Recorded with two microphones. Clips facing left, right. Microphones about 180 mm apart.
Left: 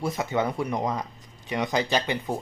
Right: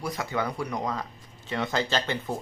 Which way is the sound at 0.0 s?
25° left (ahead or behind).